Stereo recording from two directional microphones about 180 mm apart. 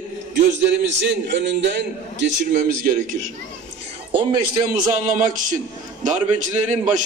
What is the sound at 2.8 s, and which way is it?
Speech, 45° right (ahead or behind).